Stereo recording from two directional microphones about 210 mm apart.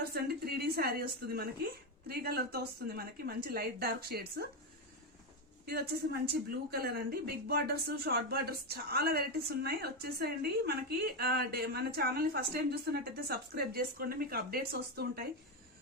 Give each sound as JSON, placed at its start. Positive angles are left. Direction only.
{"t": 0.0, "sound": "a sound", "side_deg": -50}
{"t": 2.0, "sound": "speech", "side_deg": -50}
{"t": 5.6, "sound": "speech", "side_deg": -50}